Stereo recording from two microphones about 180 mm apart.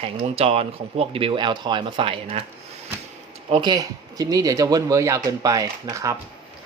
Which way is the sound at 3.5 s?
25° right (ahead or behind).